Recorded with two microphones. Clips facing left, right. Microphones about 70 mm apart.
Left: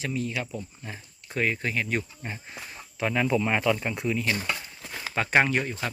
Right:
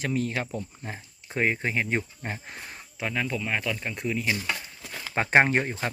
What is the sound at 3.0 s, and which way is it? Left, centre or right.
Speech, centre.